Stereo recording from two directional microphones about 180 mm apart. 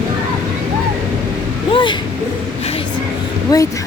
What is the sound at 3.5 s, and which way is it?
Speech, 20° left (ahead or behind).